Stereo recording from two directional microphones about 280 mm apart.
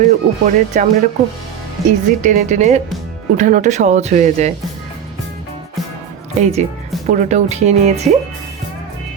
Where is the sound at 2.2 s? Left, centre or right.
Right.